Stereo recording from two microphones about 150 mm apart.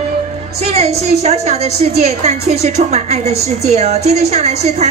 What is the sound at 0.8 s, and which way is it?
A woman's voice, 45° right (ahead or behind).